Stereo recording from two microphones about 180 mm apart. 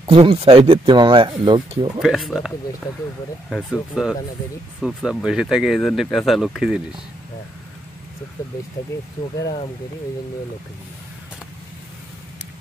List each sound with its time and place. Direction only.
0.1 s speech: 30° right (ahead or behind)
2.0 s speech: centre (ahead or behind)